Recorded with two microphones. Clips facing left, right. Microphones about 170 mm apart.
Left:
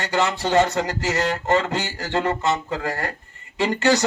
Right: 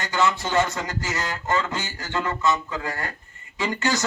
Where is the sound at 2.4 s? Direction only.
70° left (ahead or behind).